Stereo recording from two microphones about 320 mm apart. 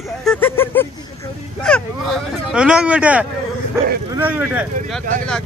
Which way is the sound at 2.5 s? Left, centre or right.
Centre.